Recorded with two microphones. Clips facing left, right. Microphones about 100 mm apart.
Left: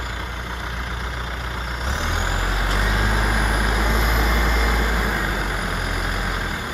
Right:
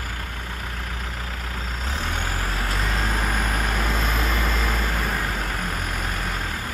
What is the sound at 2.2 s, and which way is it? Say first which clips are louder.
Vehicle: left 3 dB; 5° left (ahead or behind).